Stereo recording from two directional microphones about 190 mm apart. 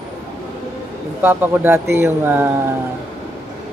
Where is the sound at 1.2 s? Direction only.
10° right (ahead or behind).